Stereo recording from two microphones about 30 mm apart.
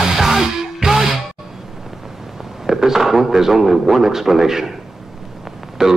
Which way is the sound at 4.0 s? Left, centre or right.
Centre.